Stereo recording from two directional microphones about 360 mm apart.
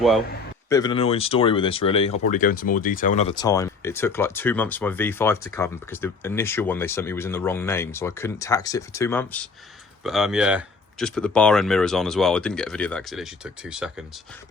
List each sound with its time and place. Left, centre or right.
0.7 s speech: centre